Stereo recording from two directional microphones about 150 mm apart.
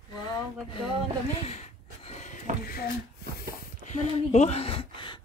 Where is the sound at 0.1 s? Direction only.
30° left (ahead or behind).